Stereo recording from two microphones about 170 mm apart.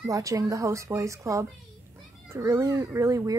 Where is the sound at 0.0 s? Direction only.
20° right (ahead or behind).